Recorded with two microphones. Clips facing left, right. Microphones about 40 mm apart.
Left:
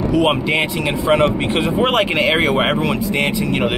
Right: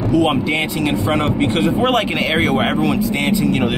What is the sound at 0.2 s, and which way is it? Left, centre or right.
A man's voice, centre.